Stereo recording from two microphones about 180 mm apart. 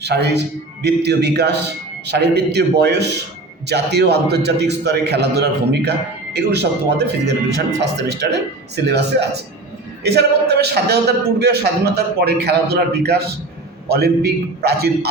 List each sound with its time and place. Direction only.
0.0 s a man's voice: 70° right (ahead or behind)